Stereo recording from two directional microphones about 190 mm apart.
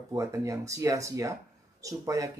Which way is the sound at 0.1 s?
15° right (ahead or behind).